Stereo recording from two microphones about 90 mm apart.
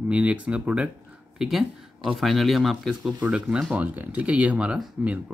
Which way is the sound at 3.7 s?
20° right (ahead or behind).